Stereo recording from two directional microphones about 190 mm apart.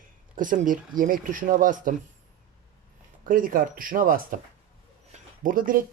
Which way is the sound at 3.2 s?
45° right (ahead or behind).